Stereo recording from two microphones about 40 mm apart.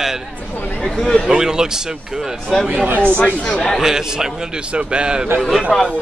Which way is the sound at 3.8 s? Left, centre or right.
Centre.